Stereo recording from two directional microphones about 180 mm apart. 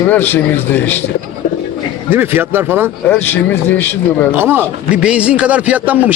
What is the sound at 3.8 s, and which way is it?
Speech, 10° left (ahead or behind).